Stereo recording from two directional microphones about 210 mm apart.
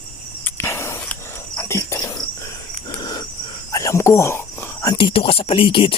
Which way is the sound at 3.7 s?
15° left (ahead or behind).